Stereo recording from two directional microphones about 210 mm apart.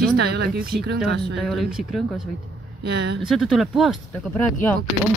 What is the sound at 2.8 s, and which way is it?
Speech, 55° right (ahead or behind).